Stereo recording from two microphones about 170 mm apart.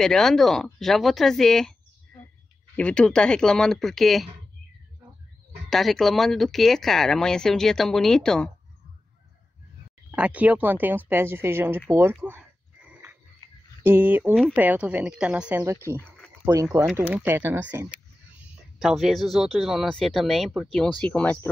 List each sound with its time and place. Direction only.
0.0 s speech: 5° left (ahead or behind)
5.7 s speech: centre (ahead or behind)
10.1 s speech: 10° right (ahead or behind)
11.9 s a sound: 15° right (ahead or behind)
13.4 s a sound: 25° left (ahead or behind)
13.8 s speech: 10° right (ahead or behind); by 21.5 s 10° left (ahead or behind)